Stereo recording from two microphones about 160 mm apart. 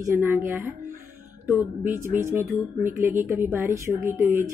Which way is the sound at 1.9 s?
15° right (ahead or behind).